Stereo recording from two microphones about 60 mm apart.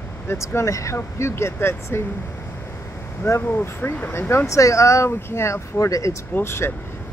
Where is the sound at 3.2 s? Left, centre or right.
Left.